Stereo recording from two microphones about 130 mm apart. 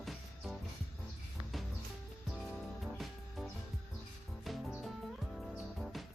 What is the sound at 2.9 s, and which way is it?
Music, centre (ahead or behind).